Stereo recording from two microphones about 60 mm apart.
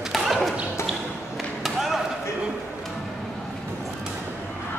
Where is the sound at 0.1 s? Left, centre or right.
Centre.